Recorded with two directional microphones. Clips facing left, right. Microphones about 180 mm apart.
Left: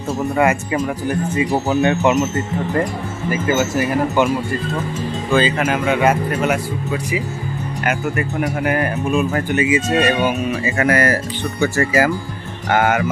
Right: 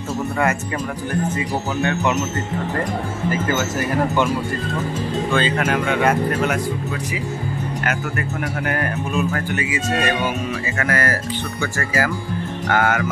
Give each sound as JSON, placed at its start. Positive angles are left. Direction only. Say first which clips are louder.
{"t": 0.4, "sound": "speech", "louder": "left 6 dB", "side_deg": 10}
{"t": 3.3, "sound": "speech", "louder": "left 4 dB", "side_deg": 10}
{"t": 5.3, "sound": "speech", "louder": "left 4 dB", "side_deg": 5}